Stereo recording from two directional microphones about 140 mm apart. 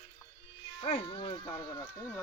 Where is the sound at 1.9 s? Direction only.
15° left (ahead or behind).